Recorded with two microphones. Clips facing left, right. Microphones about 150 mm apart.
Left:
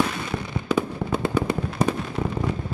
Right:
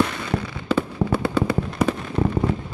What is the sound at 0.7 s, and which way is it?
Fireworks, 15° left (ahead or behind).